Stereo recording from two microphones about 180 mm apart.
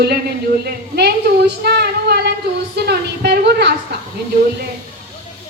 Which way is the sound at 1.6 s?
65° right (ahead or behind).